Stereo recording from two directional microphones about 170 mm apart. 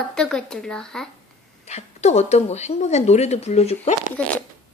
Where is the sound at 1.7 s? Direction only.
40° left (ahead or behind).